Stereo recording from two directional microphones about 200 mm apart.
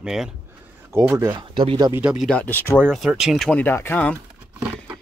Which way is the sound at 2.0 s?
5° right (ahead or behind).